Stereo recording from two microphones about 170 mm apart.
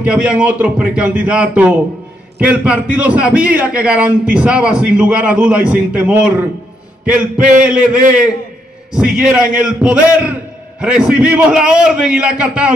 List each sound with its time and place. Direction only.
0.0 s a man's voice: 5° right (ahead or behind)